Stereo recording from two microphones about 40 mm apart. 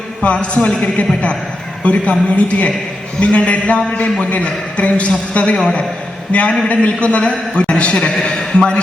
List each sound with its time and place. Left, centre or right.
0.2 s a woman's voice: left
7.9 s a man's voice: centre
8.5 s a woman's voice: left